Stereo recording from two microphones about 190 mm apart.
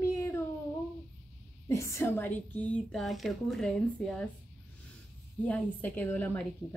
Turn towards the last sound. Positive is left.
turn(degrees=10)  # may be behind; listen again after turning